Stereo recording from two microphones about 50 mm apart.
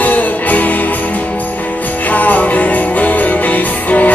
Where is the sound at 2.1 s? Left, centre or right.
Left.